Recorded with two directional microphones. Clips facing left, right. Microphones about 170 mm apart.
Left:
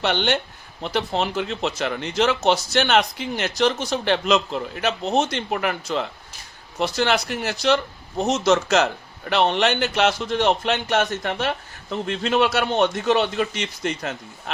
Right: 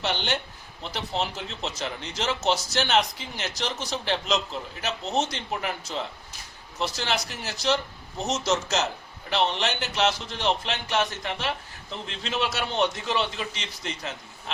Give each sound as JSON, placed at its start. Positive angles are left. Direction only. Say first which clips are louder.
{"t": 0.0, "sound": "a man's voice", "louder": "left 7 dB", "side_deg": 65}